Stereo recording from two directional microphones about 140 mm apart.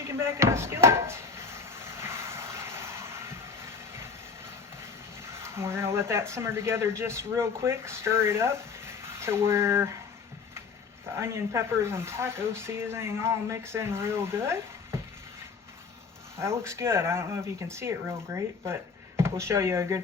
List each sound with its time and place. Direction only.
0.1 s speech: 20° right (ahead or behind)
2.0 s vehicle: 20° right (ahead or behind)
5.3 s speech: 20° right (ahead or behind)
11.2 s speech: 20° right (ahead or behind)
16.4 s speech: 20° right (ahead or behind)